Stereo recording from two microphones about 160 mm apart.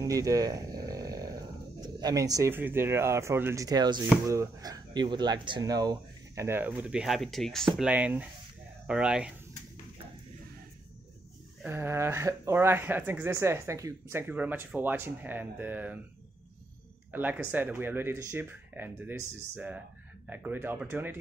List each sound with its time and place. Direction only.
0.0 s speech: 20° right (ahead or behind)
11.6 s speech: 15° right (ahead or behind)
17.1 s speech: 10° right (ahead or behind)